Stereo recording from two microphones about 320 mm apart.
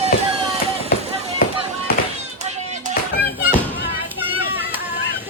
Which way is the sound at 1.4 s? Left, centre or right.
Left.